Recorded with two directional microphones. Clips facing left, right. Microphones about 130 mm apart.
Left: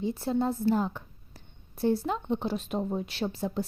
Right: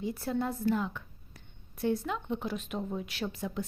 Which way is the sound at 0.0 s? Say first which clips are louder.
Left 4 dB; 25° left (ahead or behind).